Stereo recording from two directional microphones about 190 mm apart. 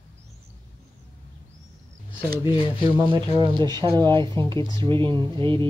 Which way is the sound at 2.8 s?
25° right (ahead or behind).